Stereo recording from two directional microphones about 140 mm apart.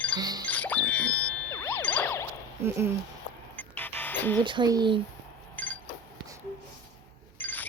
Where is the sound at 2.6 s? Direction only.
15° right (ahead or behind).